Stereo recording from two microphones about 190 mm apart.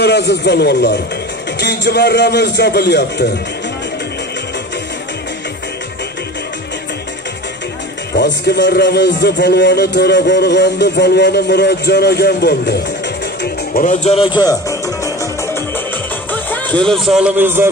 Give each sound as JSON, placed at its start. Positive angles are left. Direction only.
{"t": 0.0, "sound": "a man's voice", "side_deg": 60}
{"t": 8.1, "sound": "a man's voice", "side_deg": 60}
{"t": 13.4, "sound": "a man's voice", "side_deg": 45}
{"t": 16.3, "sound": "music", "side_deg": 10}
{"t": 16.8, "sound": "a man's voice", "side_deg": 0}